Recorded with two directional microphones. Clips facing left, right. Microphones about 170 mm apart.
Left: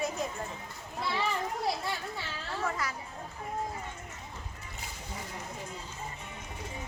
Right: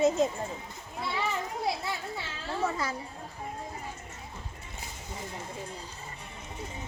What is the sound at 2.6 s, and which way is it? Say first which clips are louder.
Speech: right 3 dB; 25° right (ahead or behind).